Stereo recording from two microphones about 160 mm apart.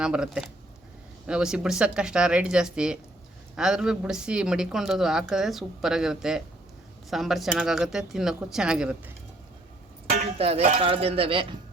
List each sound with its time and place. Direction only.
0.0 s a woman's voice: 5° right (ahead or behind)
10.1 s speech: 40° right (ahead or behind)